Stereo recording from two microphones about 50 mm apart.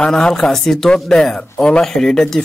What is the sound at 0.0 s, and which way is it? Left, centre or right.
Speech, centre.